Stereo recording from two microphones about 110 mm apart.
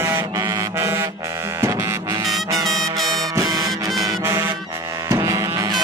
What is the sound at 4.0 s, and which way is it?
Music, 25° right (ahead or behind).